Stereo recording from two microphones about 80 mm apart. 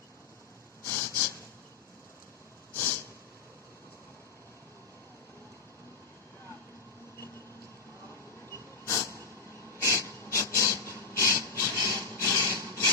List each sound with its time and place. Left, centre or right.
0.9 s snort: left
8.9 s vehicle: left
9.7 s a sound: left